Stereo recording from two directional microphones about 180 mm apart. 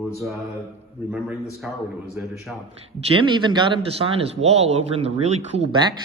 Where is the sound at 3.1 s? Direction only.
25° right (ahead or behind).